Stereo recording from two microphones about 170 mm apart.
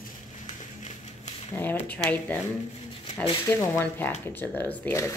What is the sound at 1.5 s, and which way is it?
Speech, 10° left (ahead or behind).